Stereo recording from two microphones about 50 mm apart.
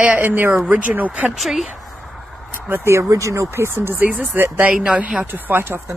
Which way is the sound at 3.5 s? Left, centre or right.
Right.